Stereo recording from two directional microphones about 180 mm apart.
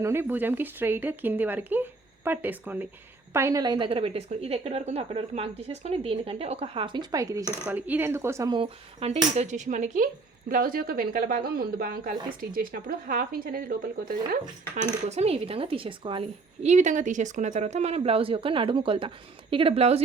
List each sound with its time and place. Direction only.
0.0 s a woman's voice: 15° right (ahead or behind); by 13.7 s 55° right (ahead or behind)
15.1 s a woman's voice: 35° right (ahead or behind)